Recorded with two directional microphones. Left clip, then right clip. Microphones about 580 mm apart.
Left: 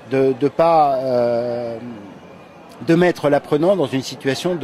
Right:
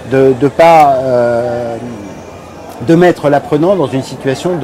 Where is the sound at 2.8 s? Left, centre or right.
Centre.